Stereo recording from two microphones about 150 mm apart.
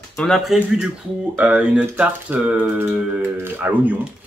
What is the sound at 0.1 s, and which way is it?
Speech, 5° left (ahead or behind).